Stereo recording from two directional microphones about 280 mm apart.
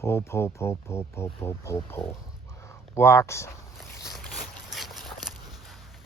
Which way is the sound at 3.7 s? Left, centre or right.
Centre.